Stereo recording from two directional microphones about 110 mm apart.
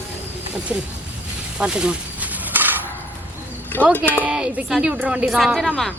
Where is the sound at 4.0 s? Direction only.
10° right (ahead or behind); by 5.9 s 5° left (ahead or behind).